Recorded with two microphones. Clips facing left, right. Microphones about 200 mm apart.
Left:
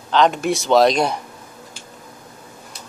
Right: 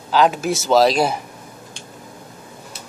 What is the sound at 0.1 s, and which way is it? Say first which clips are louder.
A man's voice: even; 5° right (ahead or behind).